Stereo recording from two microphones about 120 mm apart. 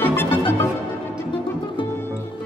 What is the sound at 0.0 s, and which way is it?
Music, 20° left (ahead or behind).